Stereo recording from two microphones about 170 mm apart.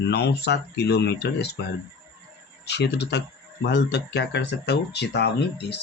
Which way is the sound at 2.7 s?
80° left.